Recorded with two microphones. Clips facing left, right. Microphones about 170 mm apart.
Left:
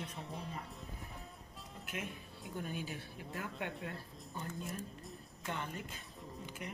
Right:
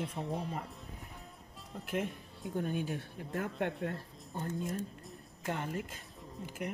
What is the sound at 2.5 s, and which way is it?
Speech, 55° right (ahead or behind).